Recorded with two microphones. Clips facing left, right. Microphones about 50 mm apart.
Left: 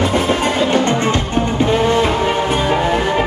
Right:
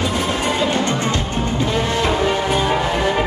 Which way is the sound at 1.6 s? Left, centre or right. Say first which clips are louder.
Left 6 dB; left.